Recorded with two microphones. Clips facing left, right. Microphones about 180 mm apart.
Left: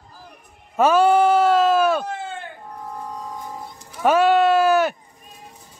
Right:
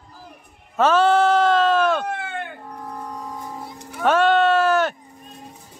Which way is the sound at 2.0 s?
65° right (ahead or behind).